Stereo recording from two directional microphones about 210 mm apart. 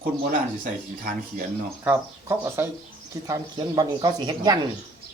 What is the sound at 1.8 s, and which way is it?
Speech, 10° right (ahead or behind).